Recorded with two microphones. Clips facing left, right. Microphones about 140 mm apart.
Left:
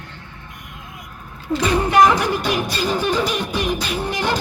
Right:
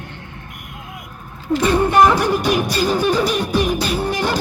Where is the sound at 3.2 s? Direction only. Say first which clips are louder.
Right 3 dB; 35° right (ahead or behind).